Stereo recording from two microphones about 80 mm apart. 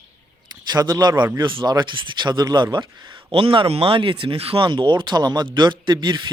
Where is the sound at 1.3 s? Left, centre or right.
Right.